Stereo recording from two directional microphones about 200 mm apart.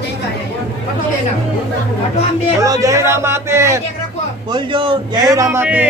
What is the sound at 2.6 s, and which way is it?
A man's voice, 15° right (ahead or behind).